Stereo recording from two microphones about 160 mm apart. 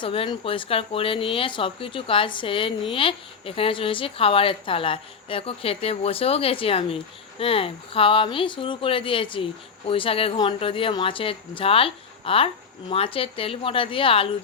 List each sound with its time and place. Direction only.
0.0 s speech: 35° left (ahead or behind)